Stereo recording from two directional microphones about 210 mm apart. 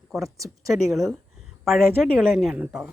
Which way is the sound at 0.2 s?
15° right (ahead or behind).